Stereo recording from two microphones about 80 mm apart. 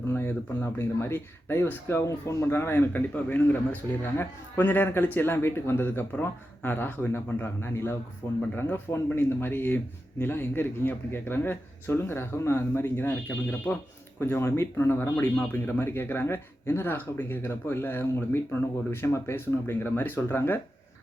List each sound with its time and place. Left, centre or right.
0.1 s speech: left